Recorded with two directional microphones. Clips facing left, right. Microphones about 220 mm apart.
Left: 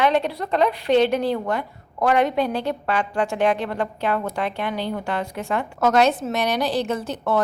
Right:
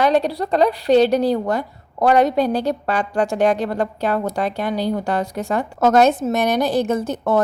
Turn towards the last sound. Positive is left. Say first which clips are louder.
# right 4 dB
turn(degrees=-45)  # may be behind; listen again after turning